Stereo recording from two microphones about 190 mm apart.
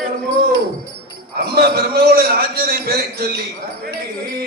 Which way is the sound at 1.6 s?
55° right (ahead or behind).